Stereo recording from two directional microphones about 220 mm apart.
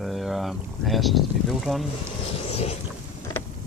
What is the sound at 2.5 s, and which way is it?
Boat, 25° left (ahead or behind).